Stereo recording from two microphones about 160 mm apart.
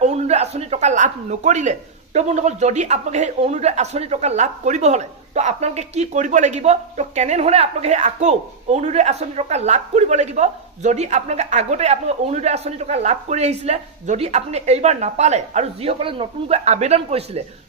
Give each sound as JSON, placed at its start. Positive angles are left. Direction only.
{"t": 0.0, "sound": "speech", "side_deg": -45}